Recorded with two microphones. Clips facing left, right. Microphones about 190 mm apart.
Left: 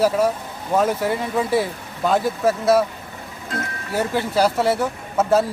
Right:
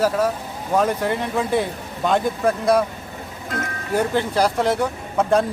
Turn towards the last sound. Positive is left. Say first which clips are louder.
# left 1 dB
turn(degrees=5)  # may be behind; listen again after turning